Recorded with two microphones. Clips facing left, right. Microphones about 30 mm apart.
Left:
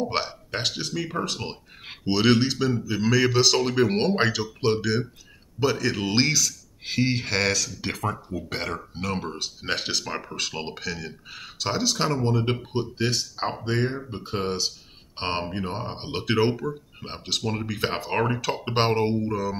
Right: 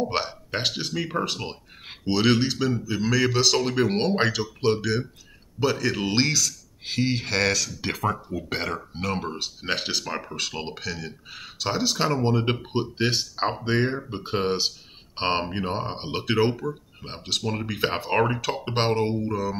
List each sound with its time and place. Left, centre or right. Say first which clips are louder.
0.0 s speech: right 1 dB; centre
1.4 s speech: even; centre
12.3 s speech: right 1 dB; right
16.1 s speech: even; centre
17.6 s speech: right 2 dB; centre
18.6 s speech: left 1 dB; centre
19.1 s speech: even; centre